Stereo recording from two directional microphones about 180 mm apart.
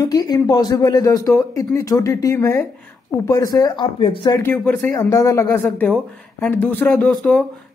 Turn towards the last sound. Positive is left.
turn(degrees=5)  # may be behind; listen again after turning